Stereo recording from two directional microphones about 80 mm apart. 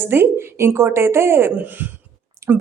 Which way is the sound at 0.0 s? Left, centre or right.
Right.